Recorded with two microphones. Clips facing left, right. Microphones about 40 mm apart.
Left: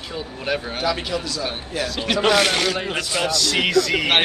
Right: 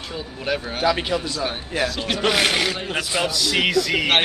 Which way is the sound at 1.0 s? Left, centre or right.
Right.